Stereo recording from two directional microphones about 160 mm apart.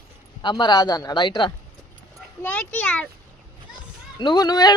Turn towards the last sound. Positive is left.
turn(degrees=25)  # may be behind; listen again after turning